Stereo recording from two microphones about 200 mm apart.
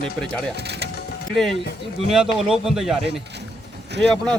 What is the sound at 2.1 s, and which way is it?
Speech, 5° right (ahead or behind).